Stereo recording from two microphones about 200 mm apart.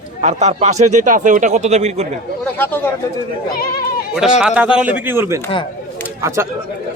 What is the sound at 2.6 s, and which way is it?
Speech, 10° left (ahead or behind).